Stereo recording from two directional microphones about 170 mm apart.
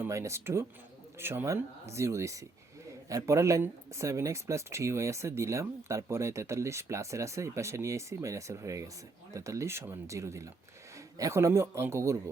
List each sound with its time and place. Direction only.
0.0 s speech: 15° right (ahead or behind)